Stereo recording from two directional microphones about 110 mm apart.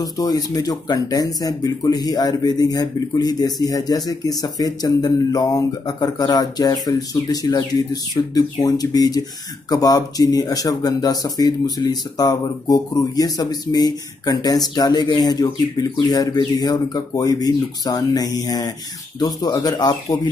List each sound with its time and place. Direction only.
0.0 s speech: 35° left (ahead or behind)